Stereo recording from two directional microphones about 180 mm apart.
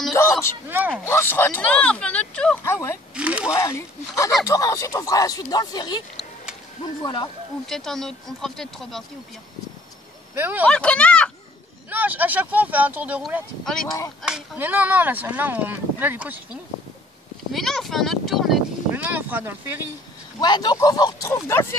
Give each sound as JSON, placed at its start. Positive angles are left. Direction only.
{"t": 0.1, "sound": "a sound", "side_deg": 15}
{"t": 0.7, "sound": "speech", "side_deg": -10}
{"t": 1.0, "sound": "speech", "side_deg": 15}
{"t": 3.2, "sound": "speech", "side_deg": -5}
{"t": 3.5, "sound": "speech", "side_deg": 15}
{"t": 7.0, "sound": "speech", "side_deg": 25}
{"t": 7.6, "sound": "speech", "side_deg": 0}
{"t": 10.3, "sound": "speech", "side_deg": -10}
{"t": 10.6, "sound": "speech", "side_deg": 5}
{"t": 11.9, "sound": "speech", "side_deg": -10}
{"t": 17.5, "sound": "a sound", "side_deg": 0}
{"t": 20.3, "sound": "speech", "side_deg": 20}